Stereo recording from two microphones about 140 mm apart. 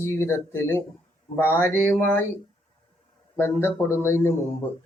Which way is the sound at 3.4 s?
15° left (ahead or behind).